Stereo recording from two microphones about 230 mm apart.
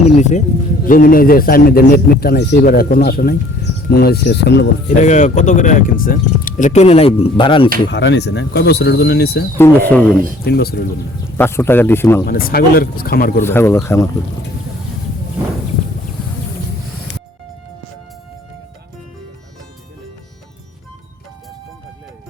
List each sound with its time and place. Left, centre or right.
0.2 s speech: left
4.9 s speech: left
7.9 s speech: left
9.6 s speech: centre
10.4 s speech: left
11.3 s speech: centre
12.2 s speech: left
13.4 s speech: centre